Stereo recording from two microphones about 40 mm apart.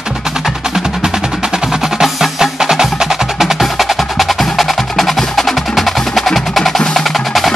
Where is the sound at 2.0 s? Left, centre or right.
Centre.